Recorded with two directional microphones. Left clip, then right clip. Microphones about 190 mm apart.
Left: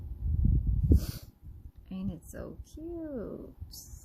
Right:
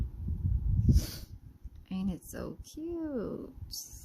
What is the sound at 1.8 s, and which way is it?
Speech, 60° right (ahead or behind).